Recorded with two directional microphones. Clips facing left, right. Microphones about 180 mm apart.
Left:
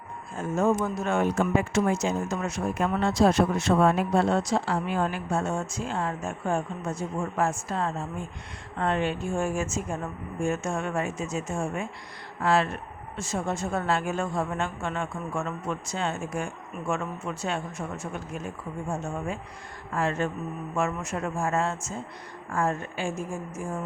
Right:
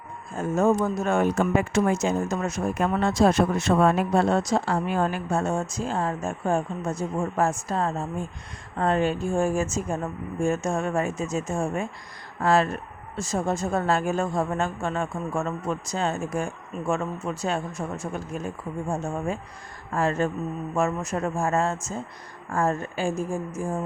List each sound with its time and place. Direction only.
0.3 s speech: 45° right (ahead or behind)
19.9 s speech: 40° right (ahead or behind)